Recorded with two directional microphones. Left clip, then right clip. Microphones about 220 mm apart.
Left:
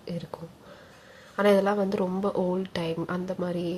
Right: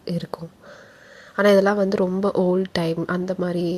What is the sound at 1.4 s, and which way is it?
A woman's voice, 25° right (ahead or behind).